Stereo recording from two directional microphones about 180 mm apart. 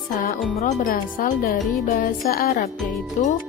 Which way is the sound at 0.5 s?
40° left (ahead or behind).